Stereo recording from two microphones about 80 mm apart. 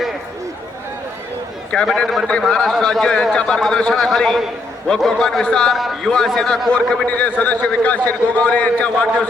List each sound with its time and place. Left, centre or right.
1.7 s a man's voice: centre